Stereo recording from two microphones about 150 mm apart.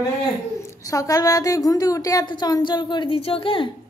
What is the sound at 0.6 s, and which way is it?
Speech, 20° left (ahead or behind).